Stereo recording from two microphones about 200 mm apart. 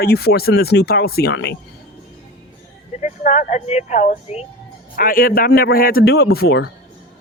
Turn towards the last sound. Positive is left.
turn(degrees=55)  # may be behind; listen again after turning